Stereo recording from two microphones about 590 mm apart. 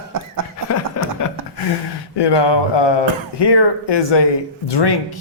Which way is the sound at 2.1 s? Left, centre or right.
Left.